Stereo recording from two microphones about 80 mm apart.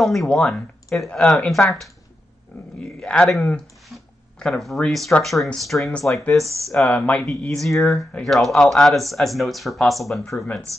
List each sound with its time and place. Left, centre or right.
0.0 s speech: centre
2.8 s speech: centre
6.4 s speech: right
6.7 s speech: centre
7.2 s speech: centre